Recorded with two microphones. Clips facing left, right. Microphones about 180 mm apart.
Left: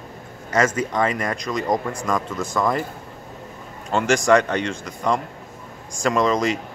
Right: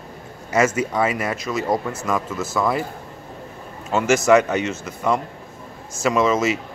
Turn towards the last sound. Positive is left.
turn(degrees=-5)  # may be behind; listen again after turning